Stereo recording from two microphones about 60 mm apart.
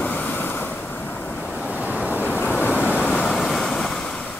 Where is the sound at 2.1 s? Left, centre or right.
Left.